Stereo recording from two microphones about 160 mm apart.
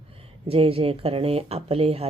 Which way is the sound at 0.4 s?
35° right (ahead or behind).